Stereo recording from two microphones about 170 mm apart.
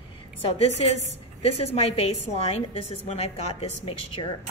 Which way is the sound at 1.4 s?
35° left (ahead or behind).